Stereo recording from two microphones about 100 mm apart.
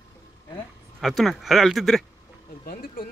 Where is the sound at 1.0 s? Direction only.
Centre (ahead or behind).